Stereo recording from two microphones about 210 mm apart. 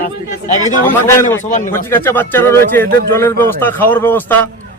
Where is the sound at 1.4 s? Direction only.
35° left (ahead or behind).